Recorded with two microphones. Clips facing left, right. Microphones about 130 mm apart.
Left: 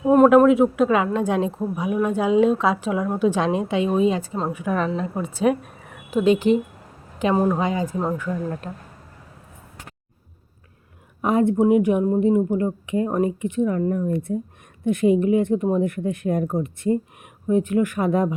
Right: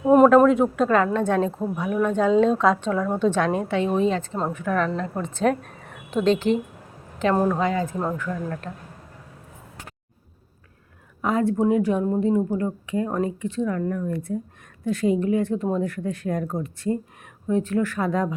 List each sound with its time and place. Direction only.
0.0 s a sound: 10° right (ahead or behind)
0.3 s a woman's voice: 5° left (ahead or behind)
11.2 s a woman's voice: 20° left (ahead or behind)